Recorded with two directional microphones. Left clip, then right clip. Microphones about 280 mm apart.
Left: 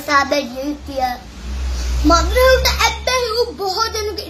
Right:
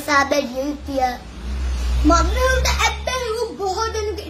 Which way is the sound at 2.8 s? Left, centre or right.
Centre.